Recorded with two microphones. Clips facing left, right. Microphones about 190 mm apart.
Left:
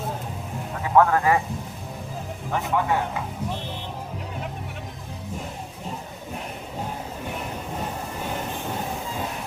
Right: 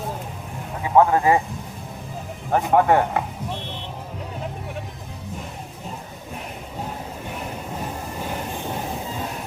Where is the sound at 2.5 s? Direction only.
55° right (ahead or behind).